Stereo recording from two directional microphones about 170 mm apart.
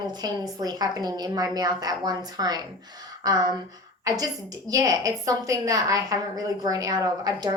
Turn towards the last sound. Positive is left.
turn(degrees=-20)  # may be behind; listen again after turning